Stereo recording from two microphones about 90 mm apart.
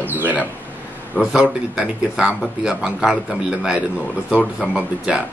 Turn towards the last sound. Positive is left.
turn(degrees=-5)  # may be behind; listen again after turning